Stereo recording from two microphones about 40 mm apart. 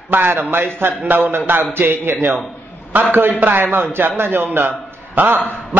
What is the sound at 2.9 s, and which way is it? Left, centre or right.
A man's voice, right.